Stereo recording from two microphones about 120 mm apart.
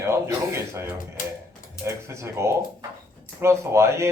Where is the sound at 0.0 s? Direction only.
25° right (ahead or behind).